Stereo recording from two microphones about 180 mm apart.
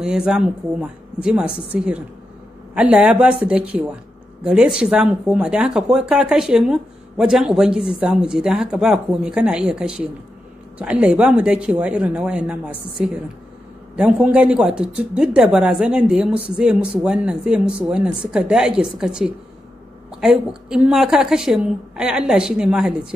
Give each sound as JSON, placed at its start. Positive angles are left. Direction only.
{"t": 0.0, "sound": "speech", "side_deg": -5}